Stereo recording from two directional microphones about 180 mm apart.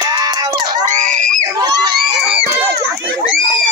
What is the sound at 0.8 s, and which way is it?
Speech, 45° right (ahead or behind).